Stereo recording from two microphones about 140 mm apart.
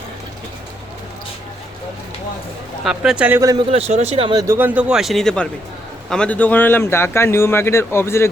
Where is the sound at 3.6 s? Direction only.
45° right (ahead or behind).